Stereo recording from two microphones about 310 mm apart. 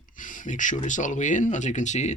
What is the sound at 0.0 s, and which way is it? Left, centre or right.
Speech, left.